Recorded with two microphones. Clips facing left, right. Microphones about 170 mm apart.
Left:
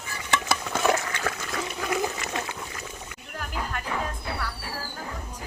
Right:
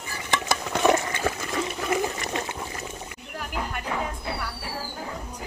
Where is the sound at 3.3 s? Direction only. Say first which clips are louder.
Right 1 dB; 10° right (ahead or behind).